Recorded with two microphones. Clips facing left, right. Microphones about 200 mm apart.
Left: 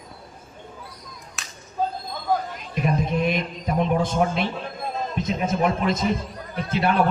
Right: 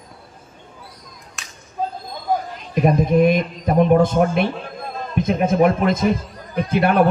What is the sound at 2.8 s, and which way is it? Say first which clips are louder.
A man's voice: right 8 dB; 50° right (ahead or behind).